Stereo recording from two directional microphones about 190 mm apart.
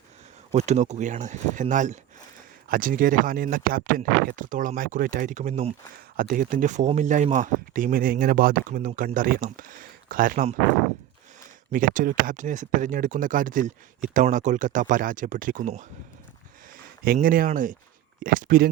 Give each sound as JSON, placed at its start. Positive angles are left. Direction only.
{"t": 0.5, "sound": "speech", "side_deg": -35}
{"t": 11.7, "sound": "speech", "side_deg": -45}
{"t": 17.0, "sound": "speech", "side_deg": -45}